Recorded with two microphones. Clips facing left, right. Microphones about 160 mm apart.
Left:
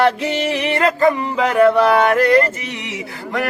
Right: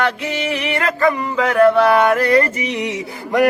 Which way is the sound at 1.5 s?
5° left (ahead or behind).